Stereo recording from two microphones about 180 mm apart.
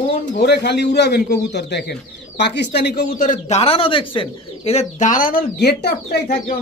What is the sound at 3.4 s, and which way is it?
Speech, 35° left (ahead or behind).